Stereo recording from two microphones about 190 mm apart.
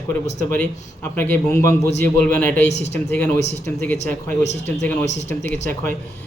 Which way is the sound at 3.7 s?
10° left (ahead or behind).